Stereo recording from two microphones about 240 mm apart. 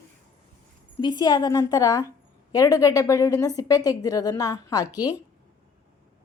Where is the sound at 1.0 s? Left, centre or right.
Centre.